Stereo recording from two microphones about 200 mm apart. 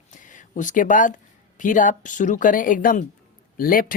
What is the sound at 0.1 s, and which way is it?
Speech, 40° left (ahead or behind).